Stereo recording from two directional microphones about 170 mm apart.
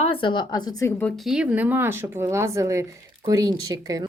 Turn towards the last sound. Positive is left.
turn(degrees=-20)  # may be behind; listen again after turning